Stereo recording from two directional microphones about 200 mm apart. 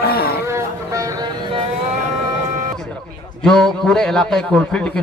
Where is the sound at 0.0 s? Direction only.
50° left (ahead or behind).